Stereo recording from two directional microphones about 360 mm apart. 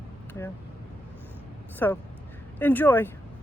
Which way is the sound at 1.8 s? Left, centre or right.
Centre.